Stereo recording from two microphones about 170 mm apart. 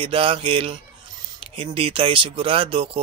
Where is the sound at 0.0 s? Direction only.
30° right (ahead or behind).